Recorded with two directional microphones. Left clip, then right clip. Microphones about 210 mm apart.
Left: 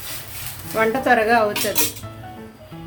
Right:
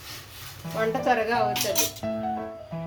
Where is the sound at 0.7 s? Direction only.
15° left (ahead or behind).